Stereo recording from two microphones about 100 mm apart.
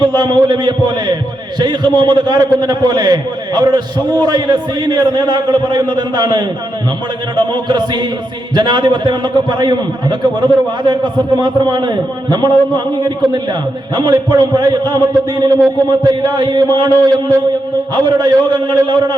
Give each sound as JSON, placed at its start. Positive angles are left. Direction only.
{"t": 0.0, "sound": "a man's voice", "side_deg": -45}
{"t": 18.2, "sound": "a man's voice", "side_deg": -45}